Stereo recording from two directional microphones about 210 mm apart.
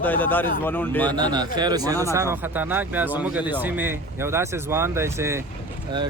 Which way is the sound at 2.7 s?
10° right (ahead or behind).